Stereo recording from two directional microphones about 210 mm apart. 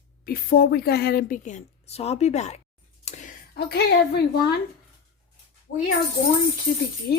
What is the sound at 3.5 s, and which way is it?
Speech, 50° left (ahead or behind).